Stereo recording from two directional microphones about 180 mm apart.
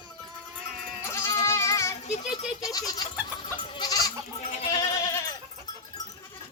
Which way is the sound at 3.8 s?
20° left (ahead or behind).